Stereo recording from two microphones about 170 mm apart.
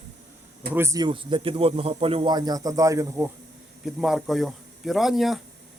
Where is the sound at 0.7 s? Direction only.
15° right (ahead or behind).